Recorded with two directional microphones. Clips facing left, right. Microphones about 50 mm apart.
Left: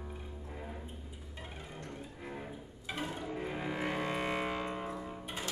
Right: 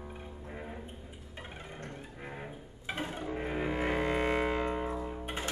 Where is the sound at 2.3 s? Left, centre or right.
Right.